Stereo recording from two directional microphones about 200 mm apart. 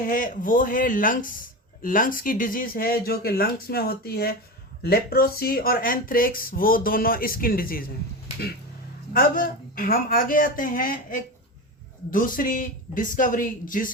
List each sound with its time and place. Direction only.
0.0 s speech: 40° left (ahead or behind)
9.1 s speech: 45° left (ahead or behind)